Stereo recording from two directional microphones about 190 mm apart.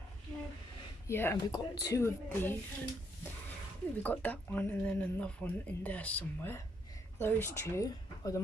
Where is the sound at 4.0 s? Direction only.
10° left (ahead or behind).